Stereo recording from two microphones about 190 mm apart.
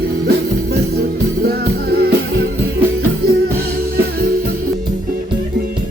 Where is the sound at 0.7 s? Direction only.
55° right (ahead or behind).